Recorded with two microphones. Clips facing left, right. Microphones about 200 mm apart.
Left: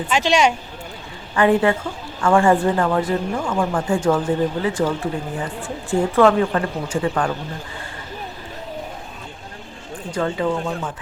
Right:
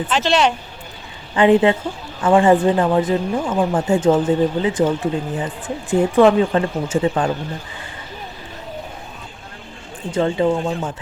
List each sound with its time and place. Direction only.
0.1 s speech: 10° left (ahead or behind)
1.3 s speech: 20° right (ahead or behind)
10.1 s speech: 25° right (ahead or behind)